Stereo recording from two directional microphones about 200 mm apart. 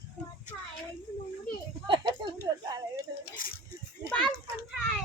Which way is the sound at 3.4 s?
45° left (ahead or behind).